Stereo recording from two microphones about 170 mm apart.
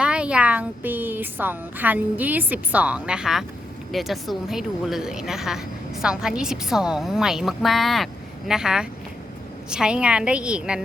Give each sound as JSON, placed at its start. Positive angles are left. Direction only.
{"t": 0.0, "sound": "a woman's voice", "side_deg": -5}